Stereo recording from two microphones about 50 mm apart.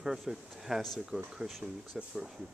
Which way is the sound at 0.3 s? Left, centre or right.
Centre.